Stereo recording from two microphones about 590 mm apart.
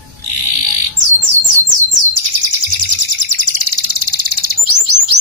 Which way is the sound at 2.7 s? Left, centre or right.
Right.